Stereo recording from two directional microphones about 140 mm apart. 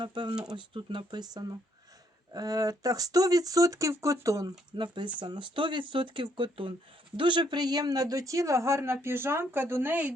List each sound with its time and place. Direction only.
0.0 s speech: 35° right (ahead or behind); by 10.1 s 15° right (ahead or behind)